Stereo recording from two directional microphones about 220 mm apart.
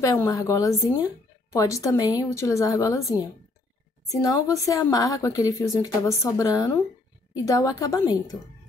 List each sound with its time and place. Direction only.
0.0 s speech: 15° left (ahead or behind)
4.1 s speech: 15° left (ahead or behind)